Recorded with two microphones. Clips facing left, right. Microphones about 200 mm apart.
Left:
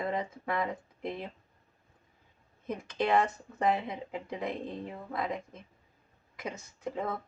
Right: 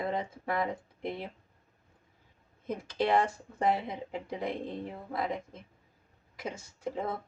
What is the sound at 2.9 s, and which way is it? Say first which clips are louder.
Speech: even; 35° right (ahead or behind).